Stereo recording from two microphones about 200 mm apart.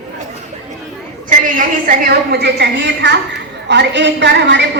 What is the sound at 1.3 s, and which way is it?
A woman's voice, 40° right (ahead or behind).